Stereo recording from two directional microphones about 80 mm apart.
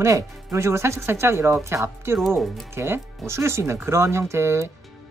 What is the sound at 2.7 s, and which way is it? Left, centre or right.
Speech, right.